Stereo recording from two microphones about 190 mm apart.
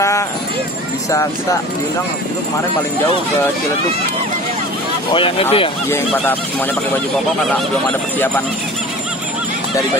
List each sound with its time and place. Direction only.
5.1 s speech: 30° left (ahead or behind)
5.9 s speech: 15° left (ahead or behind)